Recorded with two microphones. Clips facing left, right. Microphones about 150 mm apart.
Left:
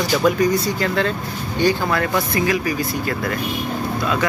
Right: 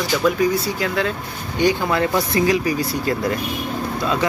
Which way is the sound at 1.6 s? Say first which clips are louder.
Right 1 dB; 20° right (ahead or behind).